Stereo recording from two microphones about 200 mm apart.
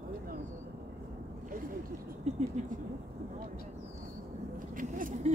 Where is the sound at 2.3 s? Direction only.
35° right (ahead or behind).